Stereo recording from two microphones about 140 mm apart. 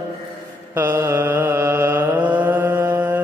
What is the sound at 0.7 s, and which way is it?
Mantra, 20° right (ahead or behind).